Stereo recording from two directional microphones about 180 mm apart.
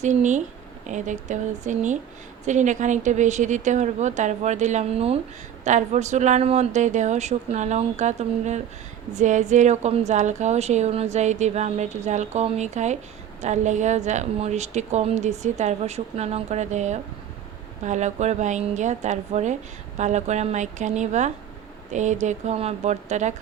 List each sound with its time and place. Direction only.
0.0 s a woman's voice: 40° right (ahead or behind)